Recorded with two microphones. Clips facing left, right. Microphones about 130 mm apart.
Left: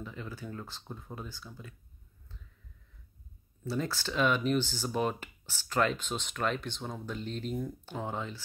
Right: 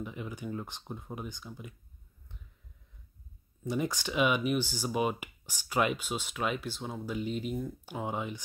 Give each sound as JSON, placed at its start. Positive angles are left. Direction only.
{"t": 0.0, "sound": "speech", "side_deg": -15}
{"t": 3.6, "sound": "speech", "side_deg": -15}